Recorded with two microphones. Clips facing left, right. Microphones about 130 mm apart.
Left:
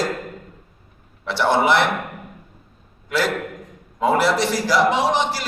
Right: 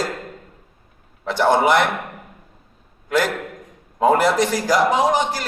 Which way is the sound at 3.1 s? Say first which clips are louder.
Right 1 dB; 45° right (ahead or behind).